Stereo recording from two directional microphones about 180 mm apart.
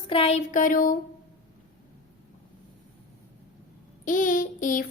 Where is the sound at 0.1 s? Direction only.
35° left (ahead or behind); by 0.9 s 50° left (ahead or behind).